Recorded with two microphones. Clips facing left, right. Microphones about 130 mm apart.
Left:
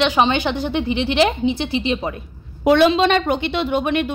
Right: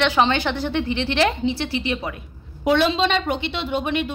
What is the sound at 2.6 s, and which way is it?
A woman's voice, 60° left (ahead or behind).